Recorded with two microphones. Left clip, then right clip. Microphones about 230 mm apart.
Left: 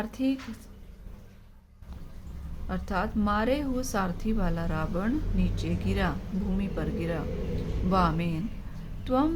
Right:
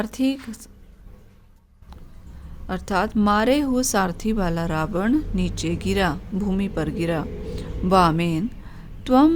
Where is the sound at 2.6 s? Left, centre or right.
Right.